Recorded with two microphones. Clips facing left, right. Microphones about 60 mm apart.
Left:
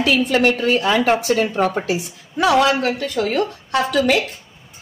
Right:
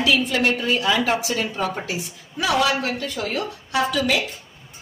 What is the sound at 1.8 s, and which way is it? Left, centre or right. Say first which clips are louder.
A woman's voice: left 6 dB; left.